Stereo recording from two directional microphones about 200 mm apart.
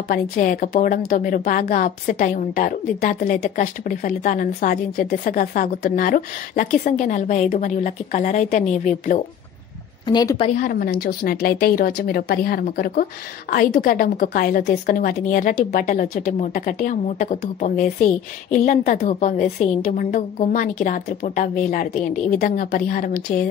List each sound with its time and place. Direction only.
0.1 s a woman's voice: 40° left (ahead or behind)
10.0 s a woman's voice: 20° left (ahead or behind)
10.6 s a woman's voice: 50° left (ahead or behind)